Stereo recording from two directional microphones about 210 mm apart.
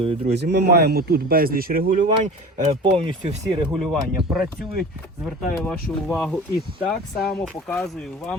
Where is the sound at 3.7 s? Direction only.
Centre (ahead or behind).